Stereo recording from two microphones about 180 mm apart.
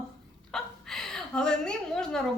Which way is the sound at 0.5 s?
Centre (ahead or behind).